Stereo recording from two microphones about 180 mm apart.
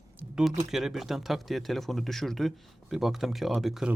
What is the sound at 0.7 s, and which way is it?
Speech, centre (ahead or behind).